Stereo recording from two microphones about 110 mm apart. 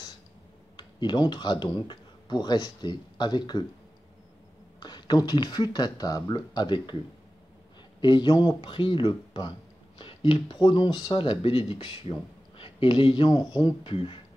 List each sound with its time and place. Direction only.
0.7 s speech: 45° left (ahead or behind)
4.7 s speech: 40° left (ahead or behind)
8.0 s speech: 45° left (ahead or behind)
11.1 s speech: 50° left (ahead or behind)
13.8 s speech: 50° left (ahead or behind)